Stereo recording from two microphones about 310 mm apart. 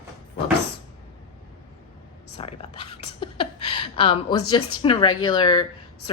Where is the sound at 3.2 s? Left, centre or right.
Centre.